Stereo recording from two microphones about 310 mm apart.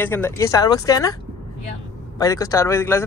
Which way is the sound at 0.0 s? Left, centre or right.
Centre.